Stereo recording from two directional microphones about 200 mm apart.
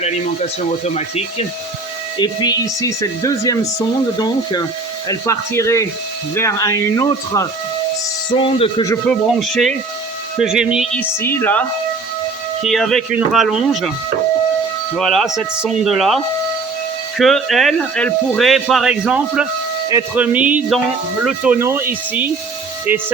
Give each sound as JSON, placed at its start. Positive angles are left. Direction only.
{"t": 0.9, "sound": "speech", "side_deg": 30}
{"t": 8.8, "sound": "speech", "side_deg": 15}
{"t": 9.2, "sound": "speech", "side_deg": 0}
{"t": 10.9, "sound": "speech", "side_deg": 10}
{"t": 12.6, "sound": "speech", "side_deg": 0}
{"t": 14.9, "sound": "speech", "side_deg": 0}